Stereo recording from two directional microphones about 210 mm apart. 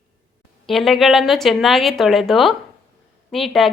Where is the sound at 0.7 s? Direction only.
Centre (ahead or behind).